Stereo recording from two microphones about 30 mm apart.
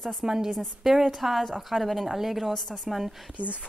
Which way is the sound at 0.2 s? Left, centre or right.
Centre.